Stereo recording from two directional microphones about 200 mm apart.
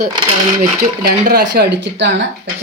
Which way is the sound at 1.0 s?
50° right (ahead or behind).